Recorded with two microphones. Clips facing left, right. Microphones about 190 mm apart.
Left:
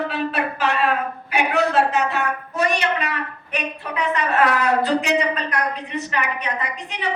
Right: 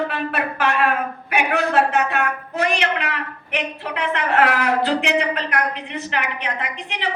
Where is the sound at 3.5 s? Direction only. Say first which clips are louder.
Right 1 dB; 70° right (ahead or behind).